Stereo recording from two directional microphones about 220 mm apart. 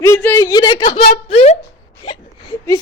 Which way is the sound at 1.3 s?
30° left (ahead or behind).